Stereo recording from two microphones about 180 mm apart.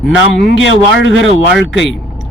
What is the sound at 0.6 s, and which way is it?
Speech, 90° left.